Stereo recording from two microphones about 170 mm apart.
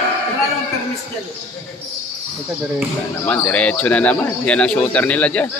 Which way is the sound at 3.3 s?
10° left (ahead or behind).